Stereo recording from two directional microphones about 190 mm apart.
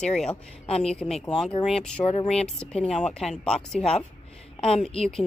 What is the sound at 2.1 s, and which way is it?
Speech, 30° left (ahead or behind).